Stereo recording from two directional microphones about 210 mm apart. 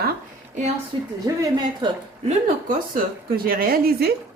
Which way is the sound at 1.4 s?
20° right (ahead or behind).